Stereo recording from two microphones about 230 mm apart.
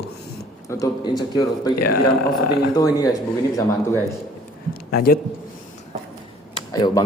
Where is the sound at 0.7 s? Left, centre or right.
Centre.